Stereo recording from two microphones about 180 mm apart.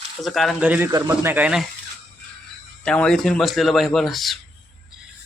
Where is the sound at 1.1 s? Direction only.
10° right (ahead or behind).